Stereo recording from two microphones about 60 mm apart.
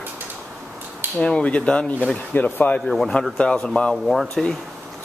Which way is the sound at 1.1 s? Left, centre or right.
Centre.